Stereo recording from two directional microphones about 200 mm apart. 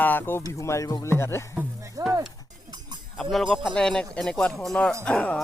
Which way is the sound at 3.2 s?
Centre (ahead or behind).